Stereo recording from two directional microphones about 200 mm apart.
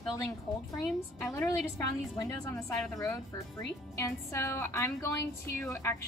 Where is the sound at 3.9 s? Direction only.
15° left (ahead or behind).